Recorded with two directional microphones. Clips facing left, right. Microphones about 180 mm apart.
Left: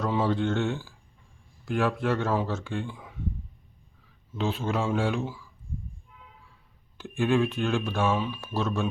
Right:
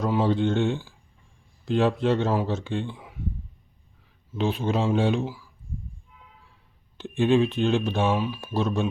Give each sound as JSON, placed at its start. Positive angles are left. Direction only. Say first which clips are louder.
{"t": 0.0, "sound": "speech", "louder": "right 3 dB", "side_deg": -15}
{"t": 4.4, "sound": "speech", "louder": "right 3 dB", "side_deg": -15}
{"t": 5.2, "sound": "speech", "louder": "right 3 dB", "side_deg": -5}
{"t": 6.9, "sound": "speech", "louder": "right 4 dB", "side_deg": -20}
{"t": 8.1, "sound": "speech", "louder": "right 3 dB", "side_deg": -5}